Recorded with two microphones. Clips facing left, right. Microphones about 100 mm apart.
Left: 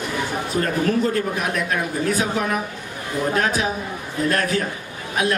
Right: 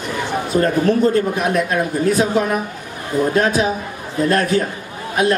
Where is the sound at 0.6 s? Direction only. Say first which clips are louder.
Right 5 dB; 30° right (ahead or behind).